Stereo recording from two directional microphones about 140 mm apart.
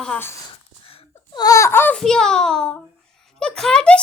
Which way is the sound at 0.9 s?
30° left (ahead or behind).